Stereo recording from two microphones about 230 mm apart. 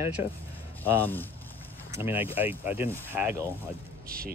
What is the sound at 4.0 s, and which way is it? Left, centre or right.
Speech, right.